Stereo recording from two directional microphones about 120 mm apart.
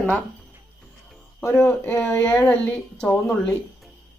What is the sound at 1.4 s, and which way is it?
Speech, 20° left (ahead or behind).